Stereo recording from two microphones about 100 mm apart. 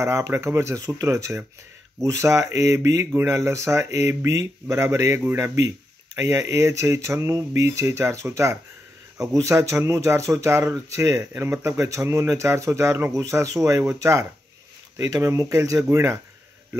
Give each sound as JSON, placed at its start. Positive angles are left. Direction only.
{"t": 0.0, "sound": "speech", "side_deg": -25}